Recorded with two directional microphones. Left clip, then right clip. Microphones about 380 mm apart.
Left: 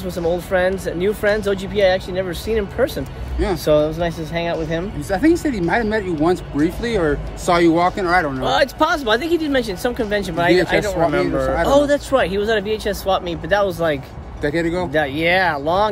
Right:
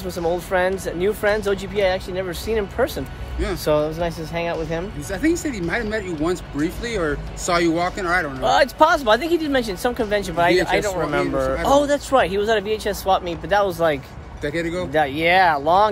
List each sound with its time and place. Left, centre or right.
0.2 s speech: centre
5.1 s speech: centre
8.4 s speech: centre
14.4 s speech: centre
14.9 s speech: centre